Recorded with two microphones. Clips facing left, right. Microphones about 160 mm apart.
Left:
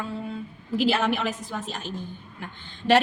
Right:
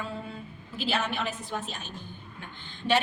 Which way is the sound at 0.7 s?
90° left.